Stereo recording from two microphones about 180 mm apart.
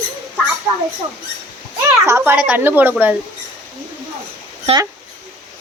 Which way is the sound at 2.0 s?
15° right (ahead or behind).